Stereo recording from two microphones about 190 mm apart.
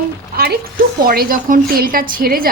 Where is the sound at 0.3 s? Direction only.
55° right (ahead or behind).